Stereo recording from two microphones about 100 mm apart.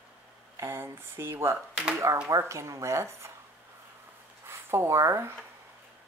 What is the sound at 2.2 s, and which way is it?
Speech, 30° right (ahead or behind).